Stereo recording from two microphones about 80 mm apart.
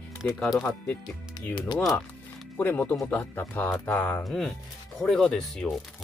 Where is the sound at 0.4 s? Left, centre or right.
Centre.